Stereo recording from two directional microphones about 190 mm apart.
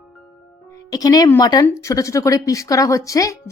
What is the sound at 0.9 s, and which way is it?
Speech, 20° left (ahead or behind).